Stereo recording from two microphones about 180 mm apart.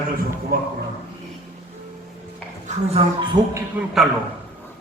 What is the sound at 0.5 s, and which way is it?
Speech, 60° right (ahead or behind).